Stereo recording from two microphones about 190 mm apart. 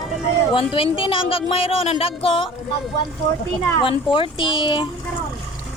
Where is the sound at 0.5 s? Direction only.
30° left (ahead or behind).